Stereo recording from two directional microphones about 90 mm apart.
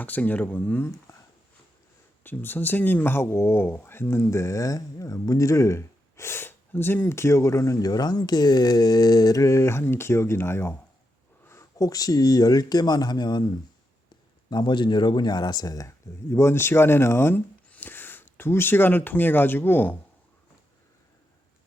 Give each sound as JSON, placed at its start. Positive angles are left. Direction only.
{"t": 0.0, "sound": "speech", "side_deg": 20}
{"t": 2.2, "sound": "speech", "side_deg": 20}
{"t": 14.5, "sound": "speech", "side_deg": 55}
{"t": 16.3, "sound": "speech", "side_deg": 30}